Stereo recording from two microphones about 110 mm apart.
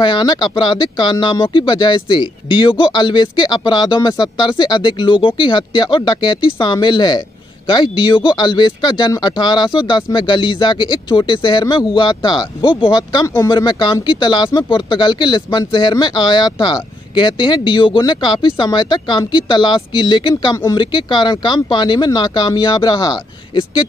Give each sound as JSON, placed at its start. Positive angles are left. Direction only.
{"t": 0.0, "sound": "speech", "side_deg": 45}